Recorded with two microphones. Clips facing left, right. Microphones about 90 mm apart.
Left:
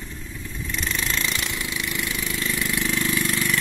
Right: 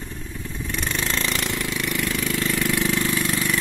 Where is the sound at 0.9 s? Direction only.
30° right (ahead or behind).